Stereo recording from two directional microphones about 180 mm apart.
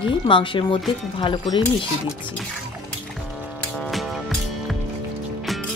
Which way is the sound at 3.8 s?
Centre (ahead or behind).